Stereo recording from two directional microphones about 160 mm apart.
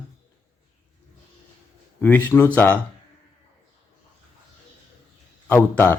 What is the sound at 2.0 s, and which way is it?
Speech, 10° left (ahead or behind).